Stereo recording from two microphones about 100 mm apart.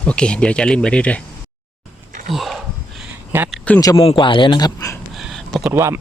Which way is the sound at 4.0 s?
60° left (ahead or behind).